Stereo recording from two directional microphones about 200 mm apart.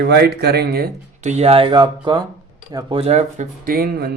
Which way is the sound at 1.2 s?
35° right (ahead or behind).